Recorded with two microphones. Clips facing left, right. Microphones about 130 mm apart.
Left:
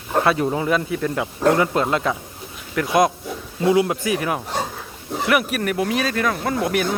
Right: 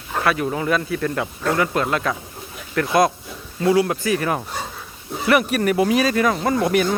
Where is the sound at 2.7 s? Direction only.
10° left (ahead or behind).